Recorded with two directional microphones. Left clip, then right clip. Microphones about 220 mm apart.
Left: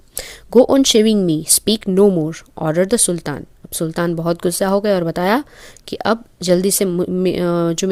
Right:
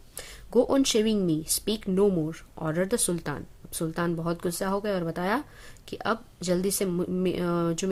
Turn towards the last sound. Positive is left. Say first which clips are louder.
# left 10 dB
turn(degrees=35)  # may be behind; listen again after turning